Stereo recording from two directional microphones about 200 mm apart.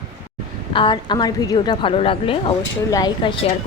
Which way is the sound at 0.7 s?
25° left (ahead or behind).